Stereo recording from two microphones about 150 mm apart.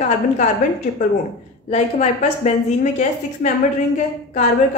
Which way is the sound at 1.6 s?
50° left (ahead or behind).